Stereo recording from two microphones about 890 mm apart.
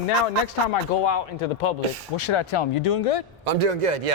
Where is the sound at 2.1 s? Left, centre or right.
Left.